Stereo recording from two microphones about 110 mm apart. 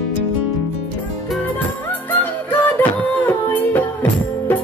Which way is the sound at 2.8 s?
15° left (ahead or behind).